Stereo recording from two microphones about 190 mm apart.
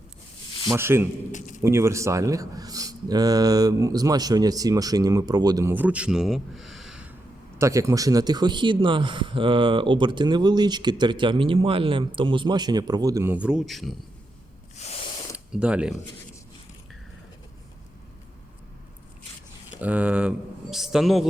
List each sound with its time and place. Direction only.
0.7 s speech: 15° right (ahead or behind)
1.3 s a sound: 40° left (ahead or behind)
1.6 s speech: 15° right (ahead or behind)
7.6 s speech: 15° right (ahead or behind); by 13.9 s centre (ahead or behind)
14.8 s a sound: 35° left (ahead or behind)
15.5 s speech: 5° right (ahead or behind)
19.8 s speech: 5° right (ahead or behind)